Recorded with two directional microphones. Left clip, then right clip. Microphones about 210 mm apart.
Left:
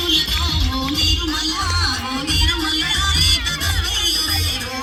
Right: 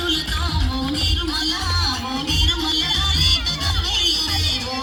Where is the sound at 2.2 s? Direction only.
60° right (ahead or behind).